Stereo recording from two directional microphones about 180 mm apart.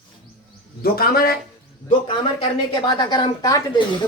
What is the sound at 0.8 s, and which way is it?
Speech, 55° left (ahead or behind).